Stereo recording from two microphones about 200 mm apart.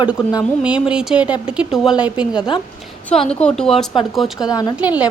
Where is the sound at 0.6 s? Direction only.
5° right (ahead or behind).